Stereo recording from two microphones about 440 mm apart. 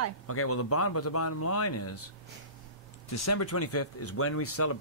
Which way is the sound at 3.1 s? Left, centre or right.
Left.